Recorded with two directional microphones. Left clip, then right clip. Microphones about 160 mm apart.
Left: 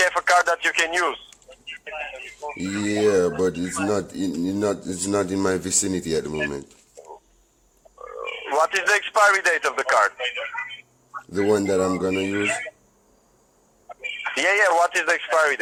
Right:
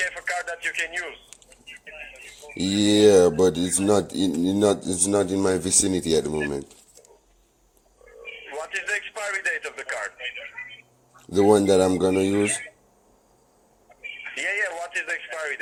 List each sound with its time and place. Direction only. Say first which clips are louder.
0.1 s speech: left 11 dB; 35° left (ahead or behind)
2.6 s speech: right 5 dB; 15° right (ahead or behind)
4.9 s speech: right 1 dB; centre (ahead or behind)
8.2 s speech: left 13 dB; 40° left (ahead or behind)
11.5 s speech: right 1 dB; 10° right (ahead or behind)
14.0 s speech: left 7 dB; 40° left (ahead or behind)